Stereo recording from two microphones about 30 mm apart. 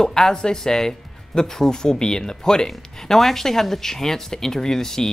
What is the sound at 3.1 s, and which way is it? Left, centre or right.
Speech, centre.